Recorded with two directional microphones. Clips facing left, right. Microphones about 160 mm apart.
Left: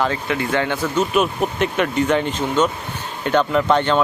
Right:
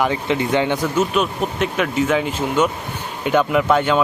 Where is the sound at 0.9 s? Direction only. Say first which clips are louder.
Left 3 dB; 5° left (ahead or behind).